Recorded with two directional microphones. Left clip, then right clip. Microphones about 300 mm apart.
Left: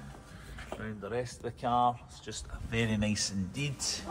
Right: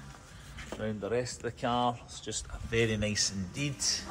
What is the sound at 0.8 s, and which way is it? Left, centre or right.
Speech, centre.